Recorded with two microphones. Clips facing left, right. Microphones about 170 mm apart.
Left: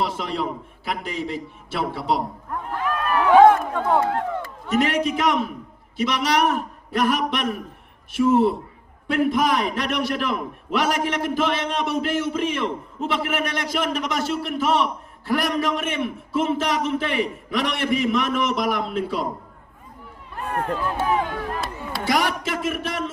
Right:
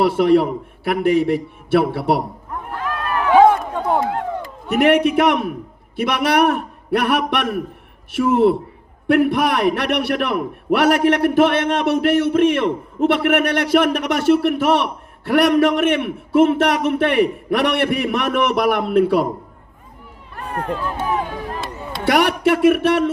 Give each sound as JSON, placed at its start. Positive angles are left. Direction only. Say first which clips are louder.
{"t": 0.0, "sound": "a man's voice", "louder": "right 11 dB", "side_deg": -65}
{"t": 3.3, "sound": "a sound", "louder": "right 1 dB", "side_deg": 0}
{"t": 3.8, "sound": "a sound", "louder": "right 1 dB", "side_deg": -10}
{"t": 4.7, "sound": "a man's voice", "louder": "right 7 dB", "side_deg": -65}
{"t": 20.7, "sound": "speech", "louder": "left 1 dB", "side_deg": 10}
{"t": 22.0, "sound": "speech", "louder": "right 7 dB", "side_deg": -65}